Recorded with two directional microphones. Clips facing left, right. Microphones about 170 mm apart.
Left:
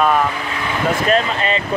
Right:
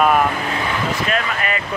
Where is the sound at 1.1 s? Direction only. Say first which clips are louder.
Left 5 dB; 25° left (ahead or behind).